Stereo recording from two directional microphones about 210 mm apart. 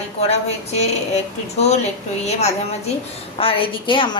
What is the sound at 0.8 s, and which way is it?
A woman's voice, 30° left (ahead or behind).